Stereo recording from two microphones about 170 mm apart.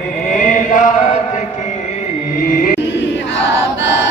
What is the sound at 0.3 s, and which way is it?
Chant, 50° left (ahead or behind).